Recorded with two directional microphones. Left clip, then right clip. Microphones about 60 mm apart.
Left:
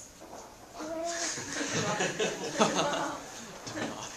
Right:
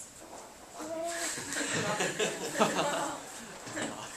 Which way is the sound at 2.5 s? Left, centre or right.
Left.